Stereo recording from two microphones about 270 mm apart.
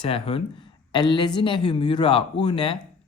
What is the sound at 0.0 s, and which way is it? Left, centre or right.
Speech, left.